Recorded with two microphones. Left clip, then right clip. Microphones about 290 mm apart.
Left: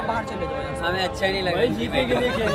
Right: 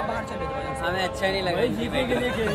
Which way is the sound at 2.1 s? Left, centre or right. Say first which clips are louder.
Left 4 dB; centre.